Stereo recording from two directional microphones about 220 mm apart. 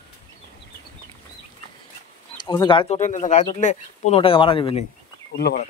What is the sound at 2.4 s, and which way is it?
Speech, 20° left (ahead or behind).